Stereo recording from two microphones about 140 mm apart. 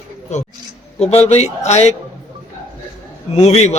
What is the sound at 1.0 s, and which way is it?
Speech, 50° left (ahead or behind).